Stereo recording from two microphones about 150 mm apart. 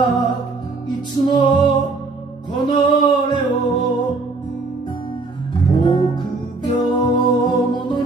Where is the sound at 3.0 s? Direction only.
30° left (ahead or behind).